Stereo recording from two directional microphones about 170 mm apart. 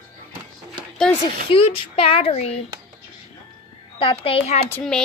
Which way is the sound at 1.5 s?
35° left (ahead or behind).